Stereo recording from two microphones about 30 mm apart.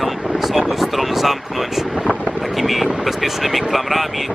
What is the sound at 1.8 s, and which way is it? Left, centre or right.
Speech, centre.